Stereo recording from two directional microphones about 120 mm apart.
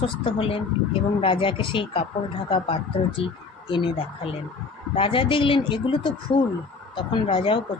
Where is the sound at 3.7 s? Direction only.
45° left (ahead or behind).